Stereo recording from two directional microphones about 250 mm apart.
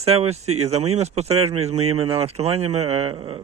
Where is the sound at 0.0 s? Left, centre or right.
Right.